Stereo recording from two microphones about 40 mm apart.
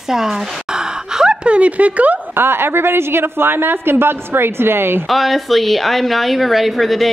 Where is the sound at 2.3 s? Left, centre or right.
Right.